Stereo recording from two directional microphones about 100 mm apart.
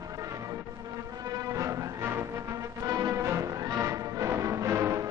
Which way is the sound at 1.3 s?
35° right (ahead or behind).